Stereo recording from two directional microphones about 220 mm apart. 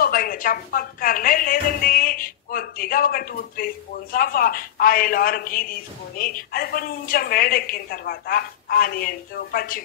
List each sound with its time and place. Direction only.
0.0 s speech: 40° left (ahead or behind)